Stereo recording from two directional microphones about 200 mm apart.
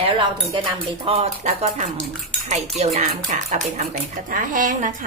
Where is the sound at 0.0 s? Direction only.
25° right (ahead or behind).